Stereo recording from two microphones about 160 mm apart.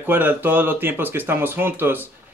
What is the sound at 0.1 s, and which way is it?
Speech, 10° right (ahead or behind).